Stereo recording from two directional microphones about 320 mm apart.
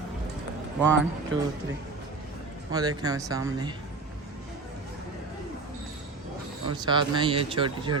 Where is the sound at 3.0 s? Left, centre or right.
Centre.